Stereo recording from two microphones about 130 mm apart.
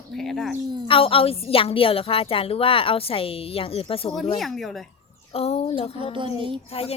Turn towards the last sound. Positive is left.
turn(degrees=50)  # may be behind; listen again after turning